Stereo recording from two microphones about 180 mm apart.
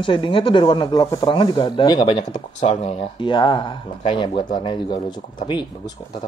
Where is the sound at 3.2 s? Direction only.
25° left (ahead or behind).